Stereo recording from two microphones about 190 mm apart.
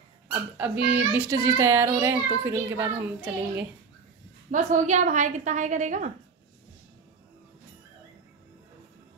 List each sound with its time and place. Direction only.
0.6 s a child's voice: 10° right (ahead or behind)
4.5 s a woman's voice: 40° right (ahead or behind)